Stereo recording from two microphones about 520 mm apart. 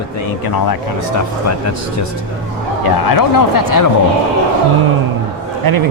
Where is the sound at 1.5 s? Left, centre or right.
Left.